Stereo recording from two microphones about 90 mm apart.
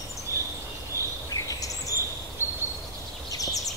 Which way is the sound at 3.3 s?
40° left (ahead or behind).